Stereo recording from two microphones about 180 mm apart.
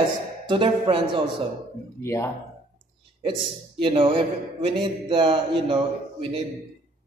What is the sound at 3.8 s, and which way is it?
A man's voice, 30° right (ahead or behind).